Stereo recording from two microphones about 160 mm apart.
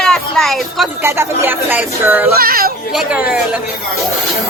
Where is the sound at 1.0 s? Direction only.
15° right (ahead or behind).